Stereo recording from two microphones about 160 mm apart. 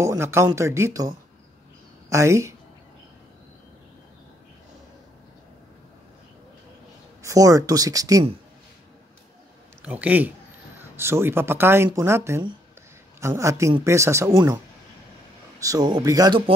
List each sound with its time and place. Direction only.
0.0 s speech: 15° right (ahead or behind)
7.2 s speech: 20° right (ahead or behind)
9.8 s speech: 10° right (ahead or behind)
15.6 s speech: 25° right (ahead or behind)